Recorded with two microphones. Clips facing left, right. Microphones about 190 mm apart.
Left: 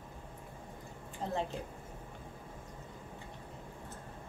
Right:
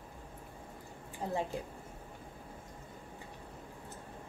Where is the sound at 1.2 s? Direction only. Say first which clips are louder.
Right 1 dB; 10° right (ahead or behind).